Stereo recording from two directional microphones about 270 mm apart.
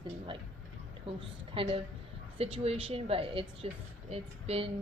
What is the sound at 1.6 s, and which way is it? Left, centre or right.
A woman's voice, centre.